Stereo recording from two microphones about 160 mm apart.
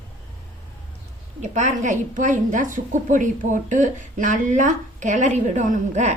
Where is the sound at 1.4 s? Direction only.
50° right (ahead or behind).